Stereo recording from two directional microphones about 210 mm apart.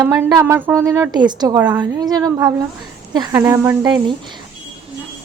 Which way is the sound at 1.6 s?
5° right (ahead or behind).